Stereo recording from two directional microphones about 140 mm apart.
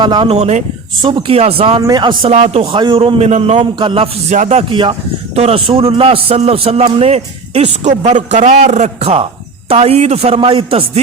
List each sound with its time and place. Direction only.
0.0 s a man's voice: 35° right (ahead or behind)
0.3 s a man's voice: 50° right (ahead or behind)
1.0 s a man's voice: 35° right (ahead or behind)
1.8 s a man's voice: 30° right (ahead or behind)
2.3 s a man's voice: 50° right (ahead or behind)
3.8 s a man's voice: 40° right (ahead or behind)
4.4 s speech: 55° right (ahead or behind)
4.7 s a man's voice: 35° right (ahead or behind)